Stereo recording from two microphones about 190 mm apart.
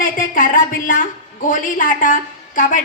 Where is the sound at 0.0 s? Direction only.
50° left (ahead or behind).